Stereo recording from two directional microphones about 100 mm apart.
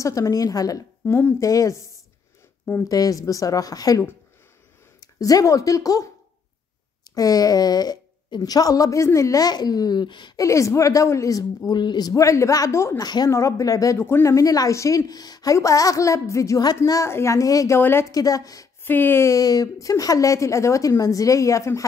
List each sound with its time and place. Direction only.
0.0 s a woman's voice: 35° left (ahead or behind)
1.0 s a woman's voice: 25° left (ahead or behind)
2.9 s a woman's voice: 35° left (ahead or behind)
5.0 s speech: 35° left (ahead or behind)
7.2 s a woman's voice: 40° left (ahead or behind)
10.3 s a woman's voice: 30° left (ahead or behind)
13.0 s a woman's voice: 45° left (ahead or behind)
13.3 s a woman's voice: 30° left (ahead or behind)
17.7 s speech: 25° left (ahead or behind)
18.1 s a woman's voice: 35° left (ahead or behind)
18.8 s a woman's voice: 20° left (ahead or behind)